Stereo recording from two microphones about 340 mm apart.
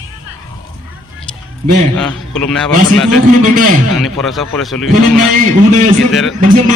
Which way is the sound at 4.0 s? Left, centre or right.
Centre.